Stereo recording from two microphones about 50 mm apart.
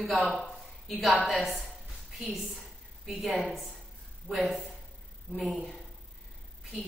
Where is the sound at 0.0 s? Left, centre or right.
Centre.